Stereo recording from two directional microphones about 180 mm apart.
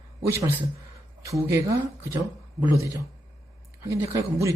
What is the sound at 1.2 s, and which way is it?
Speech, 15° right (ahead or behind).